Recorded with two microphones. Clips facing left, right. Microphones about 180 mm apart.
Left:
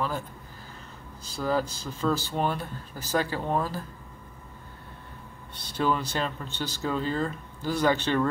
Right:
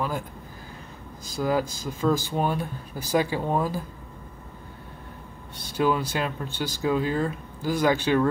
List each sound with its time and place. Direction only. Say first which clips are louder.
1.2 s speech: right 2 dB; 10° right (ahead or behind)
5.6 s speech: right 3 dB; 10° right (ahead or behind)